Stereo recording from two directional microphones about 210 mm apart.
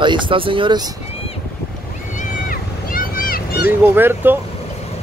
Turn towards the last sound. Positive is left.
turn(degrees=-10)  # may be behind; listen again after turning